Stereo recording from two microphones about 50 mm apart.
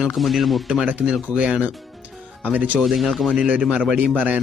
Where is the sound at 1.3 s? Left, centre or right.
Right.